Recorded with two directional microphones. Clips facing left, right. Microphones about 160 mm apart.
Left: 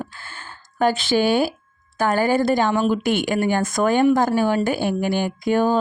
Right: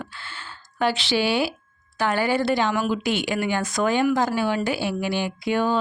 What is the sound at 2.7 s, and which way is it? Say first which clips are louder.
Speech: left 4 dB; 25° left (ahead or behind).